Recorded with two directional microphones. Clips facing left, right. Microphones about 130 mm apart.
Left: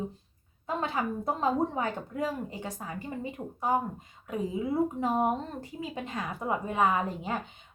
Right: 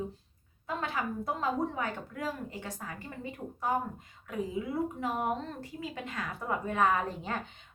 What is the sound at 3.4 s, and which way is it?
A woman's voice, 30° left (ahead or behind).